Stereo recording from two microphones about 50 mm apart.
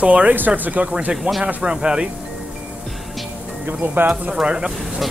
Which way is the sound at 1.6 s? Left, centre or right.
Centre.